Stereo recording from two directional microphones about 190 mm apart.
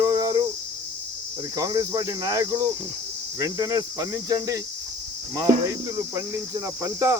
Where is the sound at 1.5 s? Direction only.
20° right (ahead or behind).